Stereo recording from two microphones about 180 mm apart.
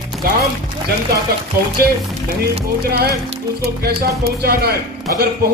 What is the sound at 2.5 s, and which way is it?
A man's voice, 65° right (ahead or behind).